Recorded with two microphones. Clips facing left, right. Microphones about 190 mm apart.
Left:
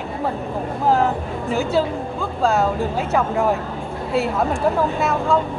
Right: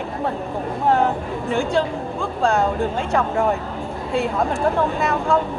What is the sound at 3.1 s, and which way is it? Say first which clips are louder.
Speech: left 1 dB; centre (ahead or behind).